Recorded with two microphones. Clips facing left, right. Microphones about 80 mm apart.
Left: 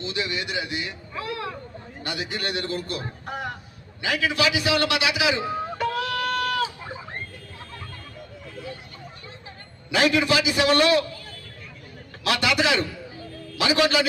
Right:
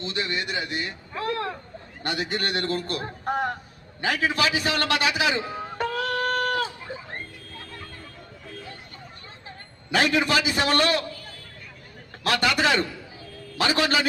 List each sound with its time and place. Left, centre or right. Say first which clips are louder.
0.0 s a man's voice: even; right
5.7 s a sound: right 3 dB; right
9.9 s speech: left 1 dB; right
12.2 s speech: even; right